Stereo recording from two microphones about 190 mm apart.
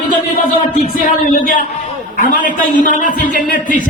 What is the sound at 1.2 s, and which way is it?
A man's voice, 45° left (ahead or behind).